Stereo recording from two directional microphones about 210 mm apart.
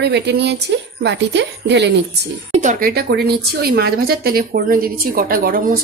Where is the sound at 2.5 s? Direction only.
35° right (ahead or behind).